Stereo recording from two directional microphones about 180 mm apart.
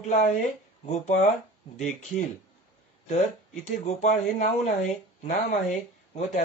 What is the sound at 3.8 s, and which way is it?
Speech, 40° left (ahead or behind).